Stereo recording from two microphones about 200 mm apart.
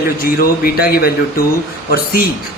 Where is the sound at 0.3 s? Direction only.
50° left (ahead or behind).